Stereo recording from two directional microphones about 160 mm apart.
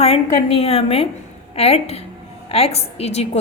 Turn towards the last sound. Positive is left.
turn(degrees=40)  # may be behind; listen again after turning